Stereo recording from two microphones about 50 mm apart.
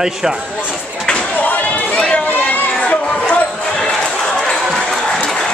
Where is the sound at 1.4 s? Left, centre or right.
Left.